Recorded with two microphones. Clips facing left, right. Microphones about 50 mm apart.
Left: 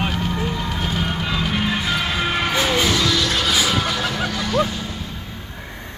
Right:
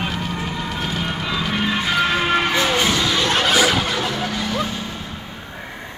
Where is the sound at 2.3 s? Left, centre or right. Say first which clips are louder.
Right 2 dB; right.